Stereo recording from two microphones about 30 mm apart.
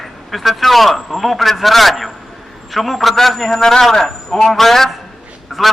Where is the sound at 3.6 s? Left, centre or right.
Centre.